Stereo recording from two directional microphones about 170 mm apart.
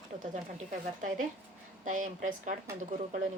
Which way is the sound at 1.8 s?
50° right (ahead or behind).